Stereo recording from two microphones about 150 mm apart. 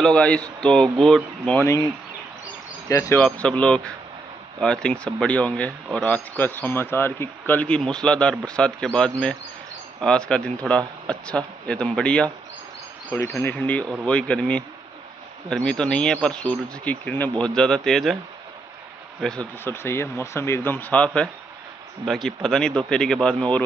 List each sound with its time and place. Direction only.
0.0 s speech: 5° left (ahead or behind)
1.6 s speech: 20° left (ahead or behind)
2.9 s speech: 20° left (ahead or behind)
3.3 s speech: 5° left (ahead or behind)
19.2 s speech: 5° left (ahead or behind)
19.7 s speech: 15° left (ahead or behind)